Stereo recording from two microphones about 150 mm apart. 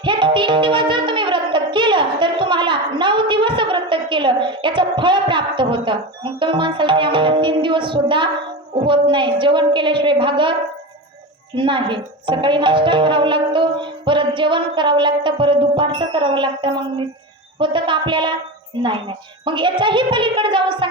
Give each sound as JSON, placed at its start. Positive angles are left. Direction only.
{"t": 0.0, "sound": "music", "side_deg": -30}
{"t": 8.7, "sound": "speech", "side_deg": -35}
{"t": 11.5, "sound": "speech", "side_deg": -35}